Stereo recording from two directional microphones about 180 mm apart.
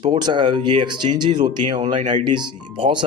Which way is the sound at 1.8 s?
40° right (ahead or behind).